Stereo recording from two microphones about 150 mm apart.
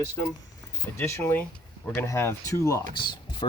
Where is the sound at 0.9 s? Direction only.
20° left (ahead or behind).